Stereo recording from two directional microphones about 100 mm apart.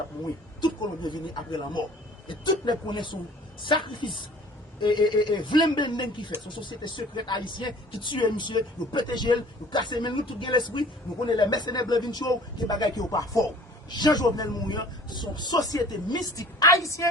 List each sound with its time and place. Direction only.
0.6 s a man's voice: 50° left (ahead or behind); by 17.1 s 30° left (ahead or behind)